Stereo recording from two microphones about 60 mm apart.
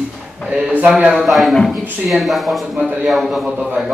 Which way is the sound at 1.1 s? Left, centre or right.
Centre.